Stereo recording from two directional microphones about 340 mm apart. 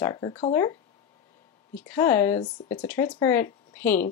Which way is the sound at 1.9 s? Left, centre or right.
Centre.